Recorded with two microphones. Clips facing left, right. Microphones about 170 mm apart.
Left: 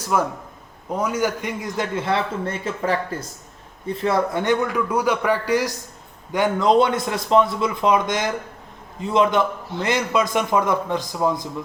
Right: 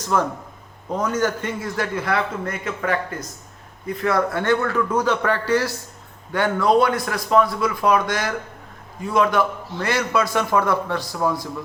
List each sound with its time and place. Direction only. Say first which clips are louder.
0.0 s a man's voice: even; 10° left (ahead or behind)